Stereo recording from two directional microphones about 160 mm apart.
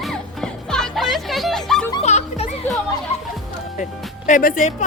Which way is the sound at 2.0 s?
45° left (ahead or behind).